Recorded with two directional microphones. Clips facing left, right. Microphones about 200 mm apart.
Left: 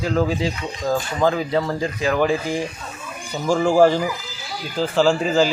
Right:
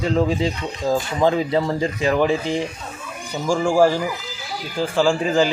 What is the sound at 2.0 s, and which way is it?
Speech, centre (ahead or behind).